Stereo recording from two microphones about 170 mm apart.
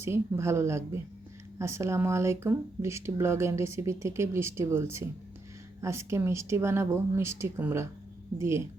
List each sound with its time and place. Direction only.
0.0 s speech: 15° right (ahead or behind)